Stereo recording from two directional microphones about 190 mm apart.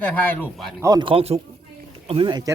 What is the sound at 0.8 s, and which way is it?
Speech, 20° right (ahead or behind).